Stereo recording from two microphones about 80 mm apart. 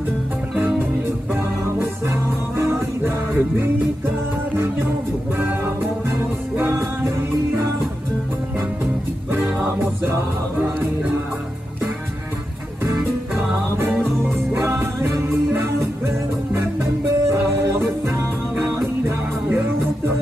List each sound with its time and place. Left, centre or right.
0.6 s music: right
6.7 s music: right
13.7 s music: right